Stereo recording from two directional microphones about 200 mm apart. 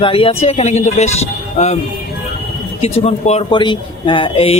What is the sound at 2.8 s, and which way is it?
Speech, 30° left (ahead or behind).